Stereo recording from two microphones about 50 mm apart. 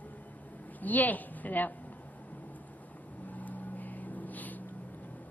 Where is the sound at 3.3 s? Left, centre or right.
Left.